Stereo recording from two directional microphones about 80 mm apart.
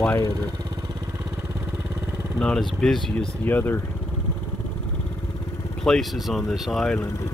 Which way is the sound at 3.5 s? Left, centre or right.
Left.